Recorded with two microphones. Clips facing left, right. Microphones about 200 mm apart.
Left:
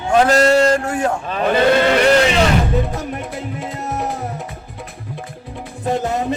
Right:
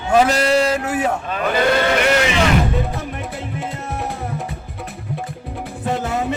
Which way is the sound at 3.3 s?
Centre (ahead or behind).